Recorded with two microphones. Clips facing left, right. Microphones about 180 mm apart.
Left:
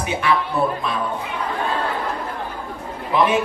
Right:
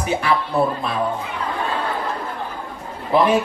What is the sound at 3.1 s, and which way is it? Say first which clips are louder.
Speech: right 2 dB; 35° right (ahead or behind).